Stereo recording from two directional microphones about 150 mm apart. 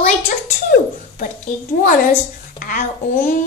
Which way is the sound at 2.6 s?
70° left (ahead or behind).